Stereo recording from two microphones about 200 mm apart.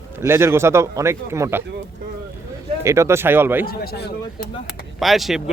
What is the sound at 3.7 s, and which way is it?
Speech, 55° left (ahead or behind).